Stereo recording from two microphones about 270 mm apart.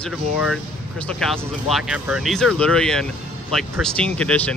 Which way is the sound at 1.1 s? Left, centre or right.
Centre.